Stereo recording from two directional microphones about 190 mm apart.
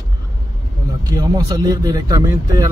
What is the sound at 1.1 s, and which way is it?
Speech, 20° right (ahead or behind).